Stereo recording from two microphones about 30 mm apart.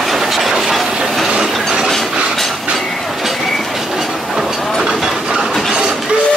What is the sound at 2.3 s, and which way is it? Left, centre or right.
Train, centre.